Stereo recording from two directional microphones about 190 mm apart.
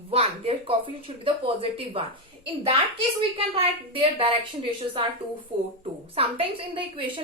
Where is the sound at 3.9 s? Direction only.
30° right (ahead or behind).